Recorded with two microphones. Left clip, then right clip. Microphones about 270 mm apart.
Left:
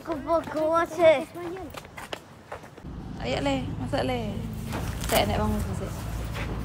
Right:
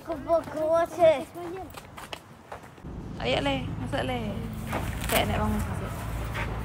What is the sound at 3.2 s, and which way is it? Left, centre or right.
A woman's voice, centre.